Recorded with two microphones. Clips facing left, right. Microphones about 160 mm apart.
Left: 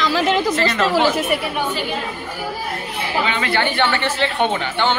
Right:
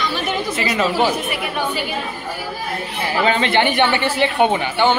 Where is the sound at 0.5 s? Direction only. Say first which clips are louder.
Left 1 dB; 10° right (ahead or behind).